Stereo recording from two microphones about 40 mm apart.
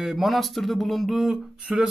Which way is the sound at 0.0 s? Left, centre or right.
Centre.